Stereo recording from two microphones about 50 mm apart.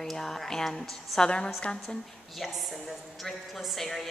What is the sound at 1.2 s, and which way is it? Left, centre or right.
Speech, centre.